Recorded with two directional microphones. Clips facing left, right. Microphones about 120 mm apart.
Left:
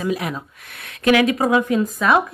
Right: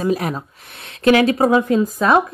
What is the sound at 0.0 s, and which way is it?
A woman's voice, 40° right (ahead or behind).